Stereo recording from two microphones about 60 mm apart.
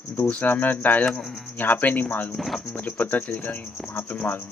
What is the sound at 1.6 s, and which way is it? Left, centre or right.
Speech, left.